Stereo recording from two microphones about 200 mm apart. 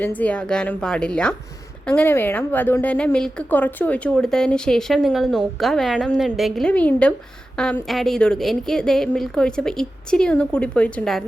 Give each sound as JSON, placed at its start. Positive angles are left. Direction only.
{"t": 0.0, "sound": "a woman's voice", "side_deg": 10}